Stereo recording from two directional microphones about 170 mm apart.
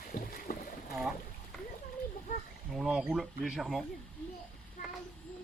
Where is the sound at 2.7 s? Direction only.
5° right (ahead or behind).